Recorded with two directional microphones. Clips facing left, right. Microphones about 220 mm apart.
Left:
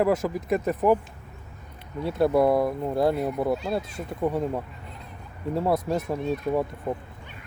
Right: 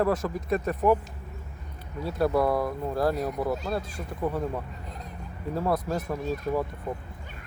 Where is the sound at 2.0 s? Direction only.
25° left (ahead or behind).